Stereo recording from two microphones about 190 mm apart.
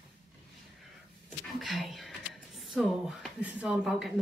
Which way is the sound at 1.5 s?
Centre (ahead or behind).